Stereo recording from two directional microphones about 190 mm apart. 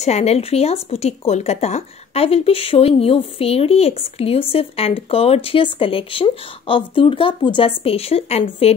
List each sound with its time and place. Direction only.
0.0 s speech: 35° left (ahead or behind)